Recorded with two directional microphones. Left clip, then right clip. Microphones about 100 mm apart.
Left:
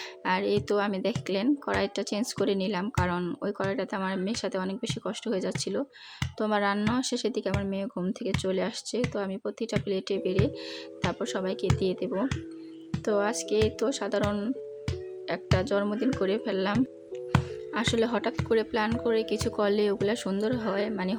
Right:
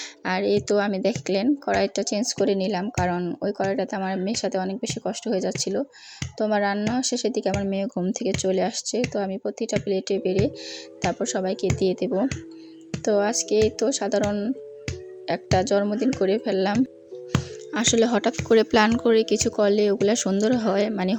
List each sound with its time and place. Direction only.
0.3 s speech: 30° right (ahead or behind)
6.7 s speech: 5° right (ahead or behind)
7.0 s speech: 20° right (ahead or behind)
15.3 s speech: 40° right (ahead or behind)
17.7 s speech: 50° right (ahead or behind); by 19.3 s 90° right
19.3 s speech: 45° right (ahead or behind)
20.1 s speech: 55° right (ahead or behind)